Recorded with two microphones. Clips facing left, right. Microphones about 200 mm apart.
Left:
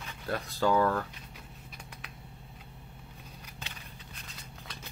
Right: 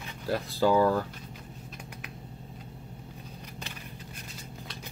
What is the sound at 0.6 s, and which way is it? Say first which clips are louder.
Speech: right 3 dB; 10° right (ahead or behind).